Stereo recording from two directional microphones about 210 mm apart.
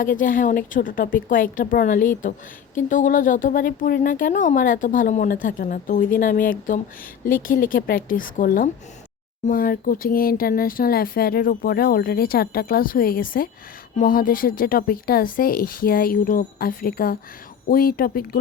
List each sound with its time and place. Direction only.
0.0 s speech: 40° left (ahead or behind)